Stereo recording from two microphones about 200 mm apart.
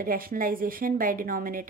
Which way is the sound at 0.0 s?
45° right (ahead or behind).